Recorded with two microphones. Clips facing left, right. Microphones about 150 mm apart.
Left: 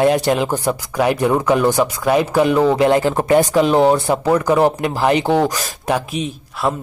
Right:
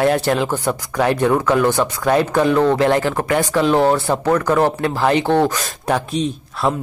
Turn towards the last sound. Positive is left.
turn(degrees=0)  # may be behind; listen again after turning